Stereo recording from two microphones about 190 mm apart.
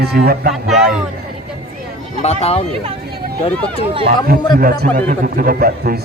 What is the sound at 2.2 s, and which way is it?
Speech, 35° left (ahead or behind).